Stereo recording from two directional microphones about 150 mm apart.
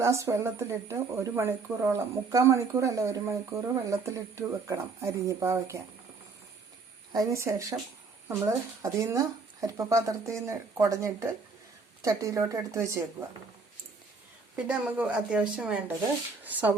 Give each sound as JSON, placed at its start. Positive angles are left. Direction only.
{"t": 0.0, "sound": "speech", "side_deg": -20}
{"t": 7.1, "sound": "speech", "side_deg": -20}
{"t": 14.5, "sound": "a woman's voice", "side_deg": -5}